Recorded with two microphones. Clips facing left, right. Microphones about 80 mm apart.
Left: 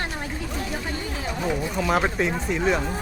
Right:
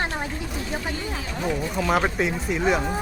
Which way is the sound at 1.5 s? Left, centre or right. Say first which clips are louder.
Right 1 dB; centre.